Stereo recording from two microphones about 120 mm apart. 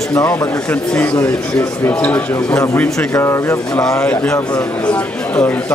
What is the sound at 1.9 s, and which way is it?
Speech, 15° left (ahead or behind).